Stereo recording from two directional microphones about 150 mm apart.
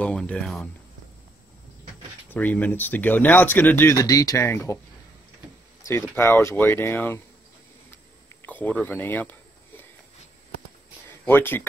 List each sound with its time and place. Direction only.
0.0 s speech: 5° left (ahead or behind)
2.2 s speech: 10° left (ahead or behind)
5.9 s speech: 15° left (ahead or behind)
8.4 s a sound: 10° left (ahead or behind)
11.2 s speech: 15° left (ahead or behind)